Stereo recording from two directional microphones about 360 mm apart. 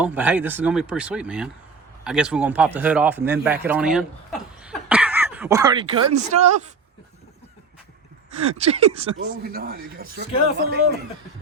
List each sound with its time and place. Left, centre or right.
0.0 s speech: centre
3.4 s a sound: centre
6.1 s speech: centre
8.4 s speech: centre
9.1 s speech: right